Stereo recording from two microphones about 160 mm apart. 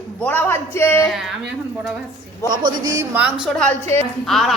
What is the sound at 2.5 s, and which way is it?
Speech, 25° right (ahead or behind).